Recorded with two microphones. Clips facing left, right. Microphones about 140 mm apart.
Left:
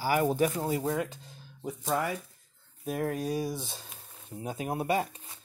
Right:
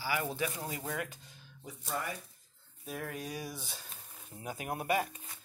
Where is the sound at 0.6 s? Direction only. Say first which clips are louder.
Left 9 dB; 30° left (ahead or behind).